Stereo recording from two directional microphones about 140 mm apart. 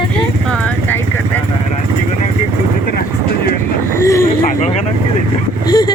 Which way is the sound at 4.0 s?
20° left (ahead or behind).